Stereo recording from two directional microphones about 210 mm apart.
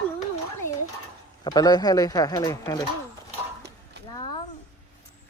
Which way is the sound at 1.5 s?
20° left (ahead or behind).